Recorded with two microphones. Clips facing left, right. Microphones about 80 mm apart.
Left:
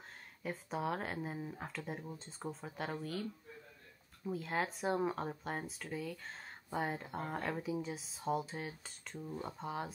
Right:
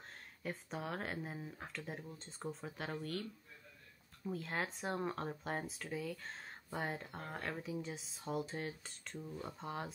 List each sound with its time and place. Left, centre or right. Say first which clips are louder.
0.4 s speech: left 4 dB; centre
4.3 s speech: left 3 dB; centre